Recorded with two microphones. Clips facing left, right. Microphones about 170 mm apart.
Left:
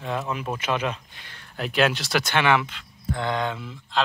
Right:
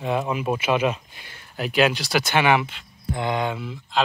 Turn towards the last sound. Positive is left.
turn(degrees=-10)  # may be behind; listen again after turning